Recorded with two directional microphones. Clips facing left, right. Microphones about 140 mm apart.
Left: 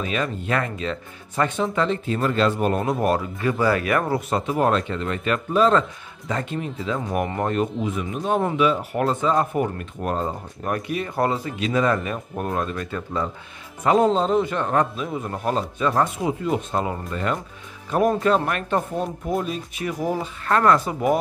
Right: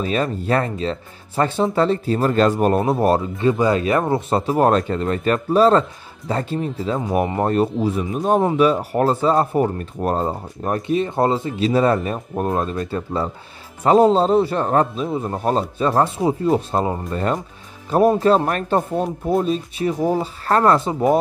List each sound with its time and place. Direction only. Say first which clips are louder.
0.0 s speech: right 4 dB; 35° right (ahead or behind)
2.8 s speech: right 4 dB; 30° right (ahead or behind)